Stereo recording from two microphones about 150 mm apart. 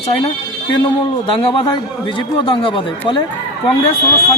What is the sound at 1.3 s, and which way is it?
Speech, 35° left (ahead or behind).